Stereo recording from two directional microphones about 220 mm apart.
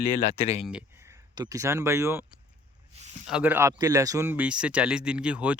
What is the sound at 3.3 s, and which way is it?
Speech, 5° right (ahead or behind).